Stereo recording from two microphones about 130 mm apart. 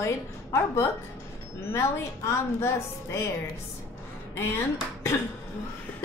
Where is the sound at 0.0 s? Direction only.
20° left (ahead or behind).